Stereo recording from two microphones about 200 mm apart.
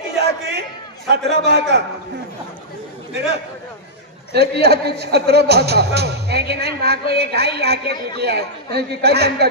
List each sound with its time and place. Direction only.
0.2 s a sound: 55° right (ahead or behind)
4.3 s a man's voice: 55° right (ahead or behind)
7.8 s speech: 25° left (ahead or behind)
8.2 s a man's voice: 55° right (ahead or behind)